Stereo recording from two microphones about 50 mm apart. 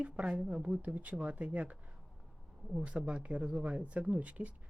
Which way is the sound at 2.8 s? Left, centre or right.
Right.